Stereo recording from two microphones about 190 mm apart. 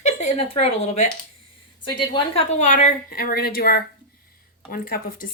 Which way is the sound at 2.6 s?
40° left (ahead or behind).